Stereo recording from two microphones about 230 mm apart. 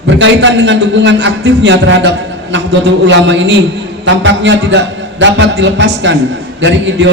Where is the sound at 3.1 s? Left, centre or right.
Right.